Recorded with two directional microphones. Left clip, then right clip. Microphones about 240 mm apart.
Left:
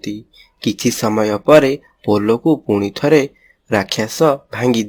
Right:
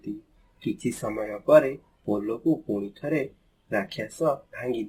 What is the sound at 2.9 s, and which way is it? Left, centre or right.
Speech, left.